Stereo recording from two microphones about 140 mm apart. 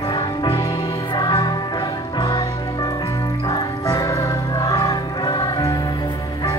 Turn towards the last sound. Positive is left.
turn(degrees=30)  # may be behind; listen again after turning